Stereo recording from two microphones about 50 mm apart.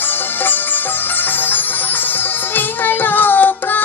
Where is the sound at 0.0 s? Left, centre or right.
Left.